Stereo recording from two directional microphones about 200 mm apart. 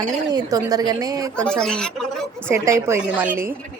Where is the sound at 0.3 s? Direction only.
20° right (ahead or behind).